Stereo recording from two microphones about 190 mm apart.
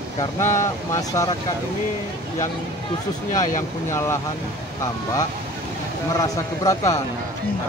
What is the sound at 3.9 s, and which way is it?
Speech, 15° left (ahead or behind).